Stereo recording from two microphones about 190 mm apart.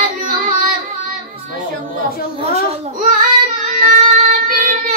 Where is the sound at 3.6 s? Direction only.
40° right (ahead or behind).